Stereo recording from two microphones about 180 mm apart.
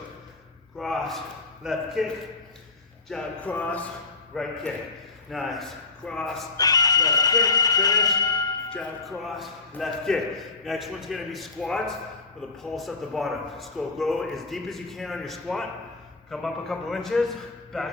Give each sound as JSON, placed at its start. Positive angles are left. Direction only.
{"t": 0.8, "sound": "a man's voice", "side_deg": 0}
{"t": 3.1, "sound": "music", "side_deg": 5}
{"t": 4.3, "sound": "a man's voice", "side_deg": 0}
{"t": 6.6, "sound": "speech", "side_deg": 20}
{"t": 8.7, "sound": "a man's voice", "side_deg": 5}